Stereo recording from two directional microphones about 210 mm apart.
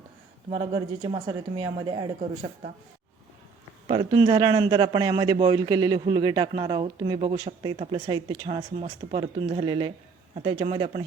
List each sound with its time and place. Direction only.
1.0 s a man's voice: 20° right (ahead or behind)
3.8 s a man's voice: 20° right (ahead or behind)